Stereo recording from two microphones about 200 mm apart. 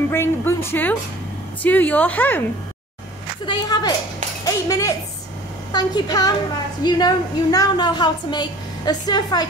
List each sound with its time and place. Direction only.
0.1 s a woman's voice: 10° left (ahead or behind)
3.4 s a woman's voice: 20° left (ahead or behind)